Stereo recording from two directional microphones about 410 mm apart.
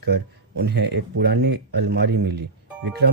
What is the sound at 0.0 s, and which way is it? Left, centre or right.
Speech, right.